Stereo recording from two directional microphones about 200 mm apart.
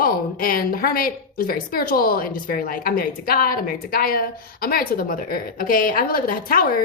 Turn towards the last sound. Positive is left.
turn(degrees=45)  # may be behind; listen again after turning